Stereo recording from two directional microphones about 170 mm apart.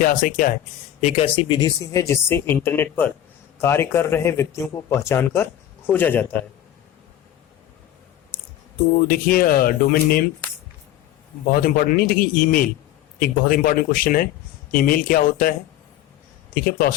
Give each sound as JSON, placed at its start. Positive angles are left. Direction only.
{"t": 0.0, "sound": "speech", "side_deg": 55}
{"t": 1.2, "sound": "speech", "side_deg": 25}
{"t": 9.0, "sound": "speech", "side_deg": 60}
{"t": 11.5, "sound": "speech", "side_deg": 60}